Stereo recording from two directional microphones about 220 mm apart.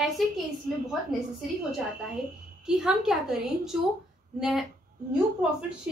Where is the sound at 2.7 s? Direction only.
5° right (ahead or behind).